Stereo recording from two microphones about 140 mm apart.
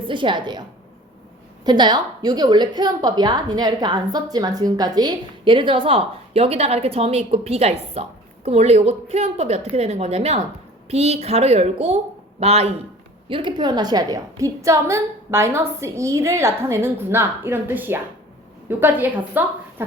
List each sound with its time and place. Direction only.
0.1 s a woman's voice: 35° right (ahead or behind)
1.6 s a woman's voice: 30° right (ahead or behind); by 12.7 s 50° right (ahead or behind)
13.2 s a woman's voice: 35° right (ahead or behind); by 19.5 s 10° right (ahead or behind)